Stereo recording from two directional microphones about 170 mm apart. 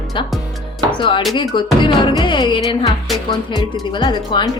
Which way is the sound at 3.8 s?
25° left (ahead or behind).